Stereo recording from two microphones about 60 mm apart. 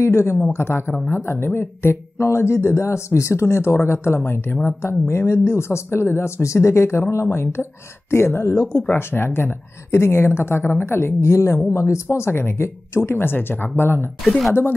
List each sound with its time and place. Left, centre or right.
0.0 s speech: left
14.2 s speech: centre